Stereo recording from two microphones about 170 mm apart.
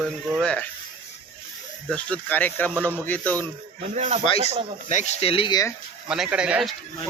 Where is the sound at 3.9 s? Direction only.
40° right (ahead or behind).